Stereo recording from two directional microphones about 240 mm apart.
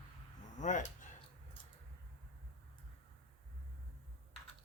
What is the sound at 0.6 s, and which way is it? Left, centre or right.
Speech, left.